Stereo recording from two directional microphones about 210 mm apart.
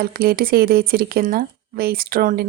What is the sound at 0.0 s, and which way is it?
Speech, 45° right (ahead or behind).